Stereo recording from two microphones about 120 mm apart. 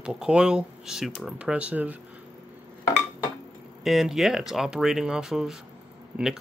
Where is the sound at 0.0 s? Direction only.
5° right (ahead or behind).